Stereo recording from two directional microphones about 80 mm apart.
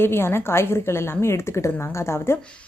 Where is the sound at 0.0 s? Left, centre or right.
Left.